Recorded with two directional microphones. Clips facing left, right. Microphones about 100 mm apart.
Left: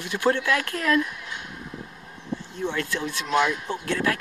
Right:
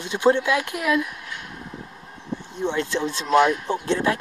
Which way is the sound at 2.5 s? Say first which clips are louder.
Right 4 dB; 20° right (ahead or behind).